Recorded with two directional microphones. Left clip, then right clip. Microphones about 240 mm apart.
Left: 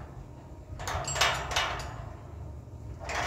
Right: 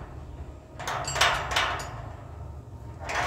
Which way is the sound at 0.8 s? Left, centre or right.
Centre.